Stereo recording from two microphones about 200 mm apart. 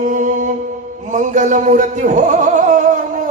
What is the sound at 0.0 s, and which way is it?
Music, 40° right (ahead or behind).